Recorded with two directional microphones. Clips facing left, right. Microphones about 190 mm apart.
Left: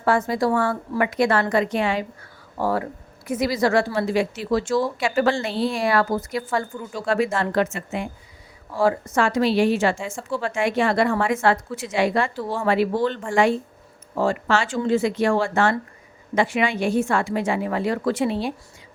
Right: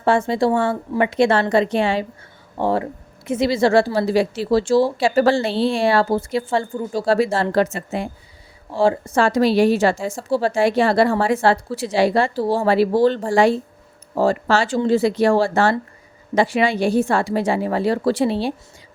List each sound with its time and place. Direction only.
0.0 s a woman's voice: 25° right (ahead or behind)